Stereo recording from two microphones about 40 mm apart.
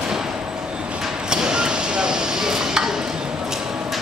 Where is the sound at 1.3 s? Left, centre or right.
Centre.